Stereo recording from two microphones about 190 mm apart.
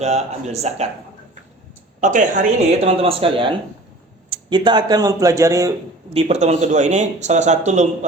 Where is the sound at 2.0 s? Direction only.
40° right (ahead or behind).